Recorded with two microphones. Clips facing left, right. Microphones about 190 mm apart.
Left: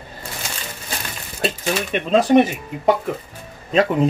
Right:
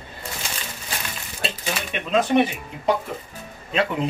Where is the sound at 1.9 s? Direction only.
40° left (ahead or behind).